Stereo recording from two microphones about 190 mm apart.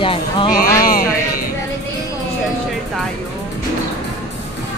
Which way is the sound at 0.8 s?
50° left (ahead or behind).